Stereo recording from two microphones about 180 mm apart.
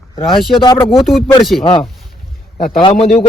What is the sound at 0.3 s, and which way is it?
Speech, centre (ahead or behind).